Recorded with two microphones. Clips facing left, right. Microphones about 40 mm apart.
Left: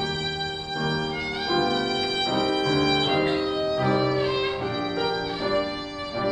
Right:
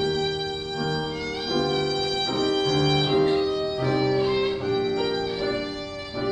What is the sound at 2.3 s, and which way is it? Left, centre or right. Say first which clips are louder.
Music: even; centre.